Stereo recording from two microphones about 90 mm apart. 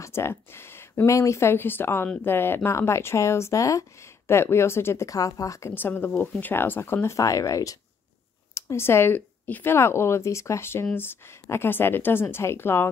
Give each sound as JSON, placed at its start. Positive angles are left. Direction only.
{"t": 0.0, "sound": "speech", "side_deg": 30}
{"t": 5.8, "sound": "speech", "side_deg": 25}